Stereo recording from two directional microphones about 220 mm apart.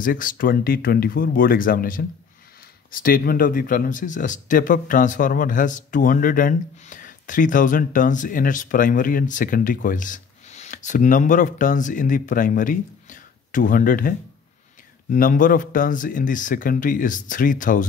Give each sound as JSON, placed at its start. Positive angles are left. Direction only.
{"t": 0.0, "sound": "speech", "side_deg": 40}